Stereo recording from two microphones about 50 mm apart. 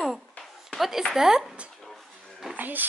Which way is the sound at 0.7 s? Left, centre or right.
Centre.